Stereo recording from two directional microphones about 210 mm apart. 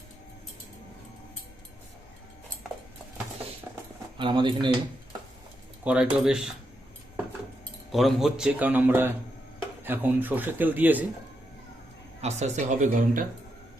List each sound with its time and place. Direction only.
4.2 s speech: 25° right (ahead or behind)
5.8 s speech: 5° right (ahead or behind)
7.9 s a man's voice: centre (ahead or behind)
12.2 s speech: 35° right (ahead or behind)